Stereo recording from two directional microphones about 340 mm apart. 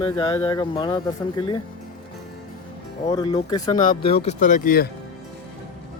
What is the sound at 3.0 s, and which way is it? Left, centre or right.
Speech, centre.